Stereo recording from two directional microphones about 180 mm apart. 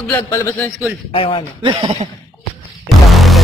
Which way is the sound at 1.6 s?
30° right (ahead or behind).